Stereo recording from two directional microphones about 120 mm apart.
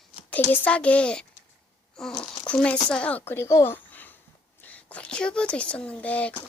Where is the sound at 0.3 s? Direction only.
15° left (ahead or behind).